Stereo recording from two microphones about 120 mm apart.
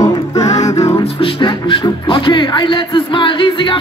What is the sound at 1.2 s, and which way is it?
Speech, 45° left (ahead or behind).